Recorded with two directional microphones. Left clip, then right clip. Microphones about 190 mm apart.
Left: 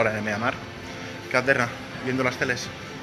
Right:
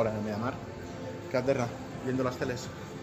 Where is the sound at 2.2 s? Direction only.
15° left (ahead or behind).